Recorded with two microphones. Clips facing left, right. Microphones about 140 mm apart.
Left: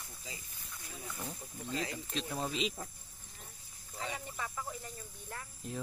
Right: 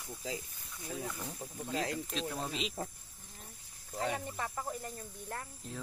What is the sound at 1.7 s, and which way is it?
Speech, 65° right (ahead or behind).